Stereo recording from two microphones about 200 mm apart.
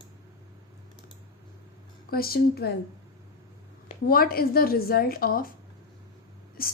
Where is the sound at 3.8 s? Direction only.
45° left (ahead or behind).